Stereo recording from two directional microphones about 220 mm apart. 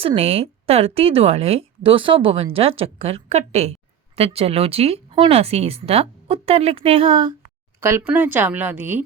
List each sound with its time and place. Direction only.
0.0 s a woman's voice: 25° right (ahead or behind)
7.8 s a woman's voice: 10° right (ahead or behind)